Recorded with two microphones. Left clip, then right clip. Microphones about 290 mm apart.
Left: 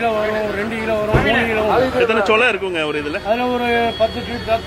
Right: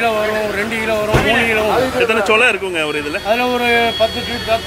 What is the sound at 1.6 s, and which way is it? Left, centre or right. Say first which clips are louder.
Speech: even; left.